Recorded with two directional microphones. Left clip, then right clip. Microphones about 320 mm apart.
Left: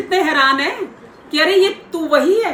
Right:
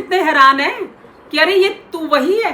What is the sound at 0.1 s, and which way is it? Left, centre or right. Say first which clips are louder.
A woman's voice: right 4 dB; right.